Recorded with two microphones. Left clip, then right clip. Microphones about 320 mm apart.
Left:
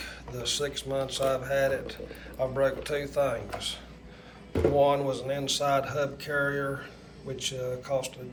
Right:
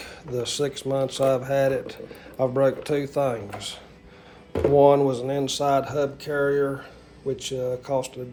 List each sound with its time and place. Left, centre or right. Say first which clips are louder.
0.3 s speech: right 5 dB; centre